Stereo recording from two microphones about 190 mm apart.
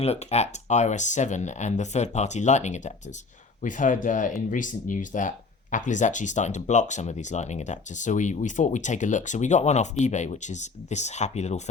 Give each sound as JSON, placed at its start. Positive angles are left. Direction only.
{"t": 0.0, "sound": "speech", "side_deg": 35}